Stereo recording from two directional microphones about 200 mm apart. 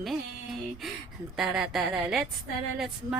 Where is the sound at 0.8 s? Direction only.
Centre (ahead or behind).